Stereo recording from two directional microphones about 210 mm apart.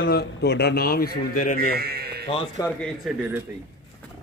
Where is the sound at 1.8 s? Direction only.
50° right (ahead or behind).